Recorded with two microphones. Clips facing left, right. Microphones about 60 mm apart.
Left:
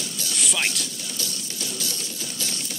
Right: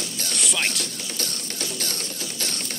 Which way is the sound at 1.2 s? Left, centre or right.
Right.